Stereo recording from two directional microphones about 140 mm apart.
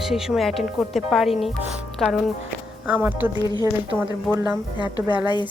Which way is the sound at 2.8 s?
10° right (ahead or behind).